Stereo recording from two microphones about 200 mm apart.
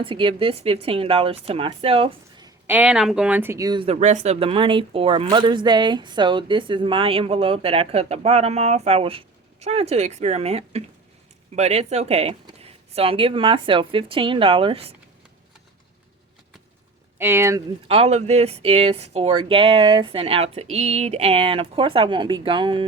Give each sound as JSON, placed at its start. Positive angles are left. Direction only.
{"t": 0.0, "sound": "speech", "side_deg": -25}
{"t": 2.6, "sound": "speech", "side_deg": -5}
{"t": 17.2, "sound": "speech", "side_deg": -10}
{"t": 17.8, "sound": "speech", "side_deg": -30}